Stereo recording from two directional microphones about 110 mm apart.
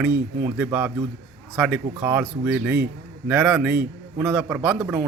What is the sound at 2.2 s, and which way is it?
Speech, 5° right (ahead or behind).